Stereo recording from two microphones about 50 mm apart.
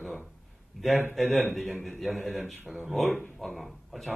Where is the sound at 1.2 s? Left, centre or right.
Left.